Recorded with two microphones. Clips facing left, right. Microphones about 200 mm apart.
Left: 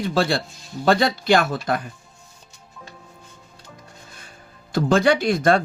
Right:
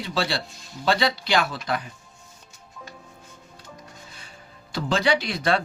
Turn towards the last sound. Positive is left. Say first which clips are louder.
# left 5 dB
turn(degrees=50)  # may be behind; listen again after turning